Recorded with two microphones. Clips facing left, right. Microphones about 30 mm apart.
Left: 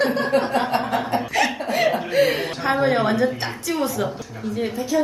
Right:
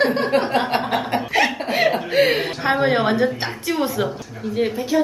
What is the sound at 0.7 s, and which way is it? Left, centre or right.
Chuckle, right.